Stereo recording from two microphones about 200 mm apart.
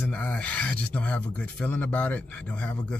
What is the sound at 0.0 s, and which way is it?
Speech, 5° left (ahead or behind).